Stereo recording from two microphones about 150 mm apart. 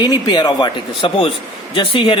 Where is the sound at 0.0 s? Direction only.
30° left (ahead or behind).